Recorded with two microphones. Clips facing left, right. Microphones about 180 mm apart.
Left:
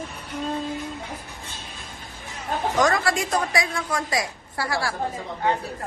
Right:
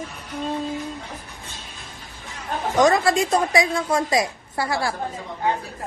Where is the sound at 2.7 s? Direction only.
20° right (ahead or behind).